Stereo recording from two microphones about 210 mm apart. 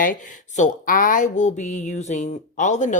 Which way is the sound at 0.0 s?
40° left (ahead or behind).